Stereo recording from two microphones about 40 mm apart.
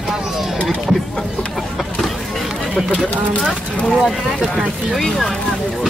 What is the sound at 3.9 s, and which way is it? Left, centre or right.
Speech, centre.